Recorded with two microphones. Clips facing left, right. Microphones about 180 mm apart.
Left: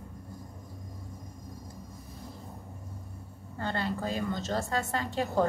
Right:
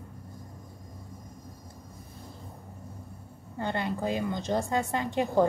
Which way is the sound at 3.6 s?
20° right (ahead or behind).